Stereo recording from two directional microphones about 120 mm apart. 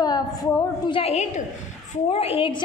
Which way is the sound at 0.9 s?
60° left (ahead or behind).